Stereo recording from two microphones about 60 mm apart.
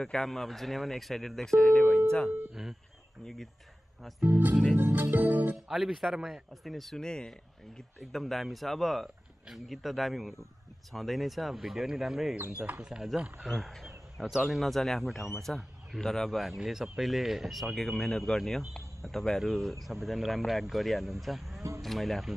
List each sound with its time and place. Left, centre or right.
0.0 s speech: centre
4.2 s speech: right
4.7 s music: right
5.1 s speech: right
5.7 s speech: centre